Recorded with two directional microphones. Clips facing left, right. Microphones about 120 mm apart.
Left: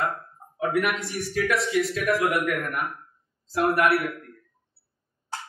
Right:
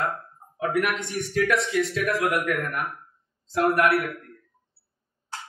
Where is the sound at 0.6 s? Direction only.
5° left (ahead or behind).